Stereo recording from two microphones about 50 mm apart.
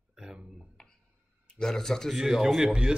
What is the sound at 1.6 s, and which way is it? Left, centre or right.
Speech, centre.